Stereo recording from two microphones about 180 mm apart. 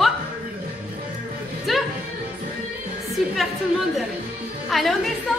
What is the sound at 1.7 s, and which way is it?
Music, centre (ahead or behind).